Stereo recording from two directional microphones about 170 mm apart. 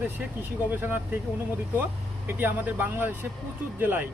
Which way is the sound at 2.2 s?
10° right (ahead or behind).